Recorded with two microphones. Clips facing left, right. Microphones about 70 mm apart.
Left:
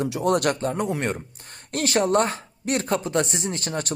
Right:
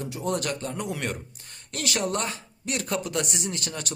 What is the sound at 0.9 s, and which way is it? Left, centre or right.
Speech, left.